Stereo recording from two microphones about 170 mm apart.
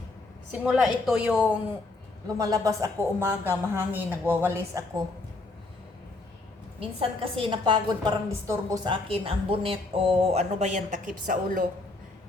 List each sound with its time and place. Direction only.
0.6 s speech: 5° right (ahead or behind)
2.2 s speech: 20° right (ahead or behind)
6.7 s a woman's voice: 35° right (ahead or behind); by 11.6 s 55° right (ahead or behind)